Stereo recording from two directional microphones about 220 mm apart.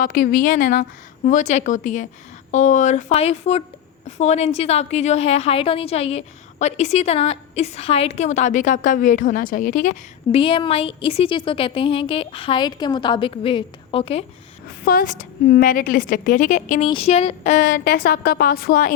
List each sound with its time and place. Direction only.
0.0 s a woman's voice: 40° left (ahead or behind)
10.3 s a woman's voice: 25° left (ahead or behind)
14.8 s a woman's voice: 40° left (ahead or behind)